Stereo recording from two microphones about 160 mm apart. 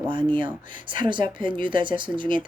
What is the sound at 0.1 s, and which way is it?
A woman's voice, 30° right (ahead or behind).